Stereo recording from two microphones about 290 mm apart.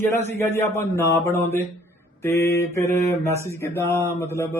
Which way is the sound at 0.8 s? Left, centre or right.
Centre.